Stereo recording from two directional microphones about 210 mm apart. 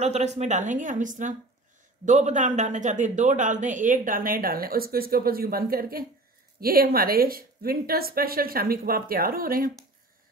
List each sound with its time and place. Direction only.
0.0 s a man's voice: 30° right (ahead or behind)